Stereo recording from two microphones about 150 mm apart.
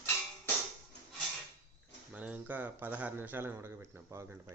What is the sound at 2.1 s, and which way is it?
A man's voice, 10° right (ahead or behind).